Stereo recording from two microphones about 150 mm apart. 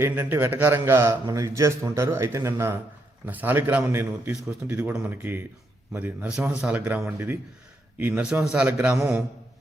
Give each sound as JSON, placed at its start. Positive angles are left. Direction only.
{"t": 0.0, "sound": "a man's voice", "side_deg": -15}